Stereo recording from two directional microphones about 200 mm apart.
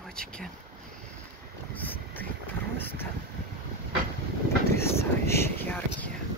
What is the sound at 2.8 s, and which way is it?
Speech, 10° left (ahead or behind).